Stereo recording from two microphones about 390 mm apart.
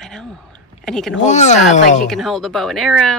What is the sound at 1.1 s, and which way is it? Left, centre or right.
Speech, centre.